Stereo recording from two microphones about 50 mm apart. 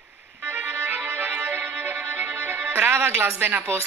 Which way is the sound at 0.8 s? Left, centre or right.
Right.